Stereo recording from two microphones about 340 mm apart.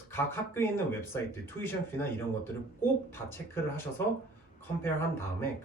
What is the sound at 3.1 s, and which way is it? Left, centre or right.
Speech, centre.